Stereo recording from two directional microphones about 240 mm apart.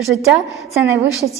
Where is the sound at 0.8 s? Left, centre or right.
Centre.